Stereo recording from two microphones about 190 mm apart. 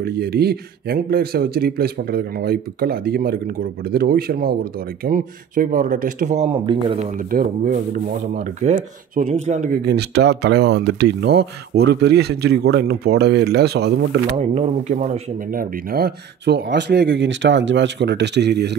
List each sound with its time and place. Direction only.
0.0 s speech: 55° right (ahead or behind); by 7.1 s 25° right (ahead or behind)
7.2 s speech: 50° right (ahead or behind)
9.8 s speech: 60° right (ahead or behind)
14.5 s speech: 35° right (ahead or behind)
15.5 s speech: 50° right (ahead or behind)